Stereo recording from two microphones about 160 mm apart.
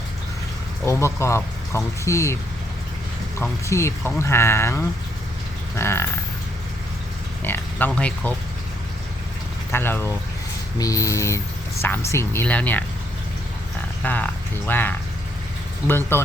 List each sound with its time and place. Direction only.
0.9 s speech: 15° left (ahead or behind)
3.4 s speech: 15° left (ahead or behind)
7.4 s a sound: 10° left (ahead or behind)
7.9 s speech: 5° left (ahead or behind)
9.7 s speech: 15° left (ahead or behind)
10.8 s a sound: 20° left (ahead or behind)
11.8 s speech: 15° left (ahead or behind)
14.0 s speech: 10° left (ahead or behind)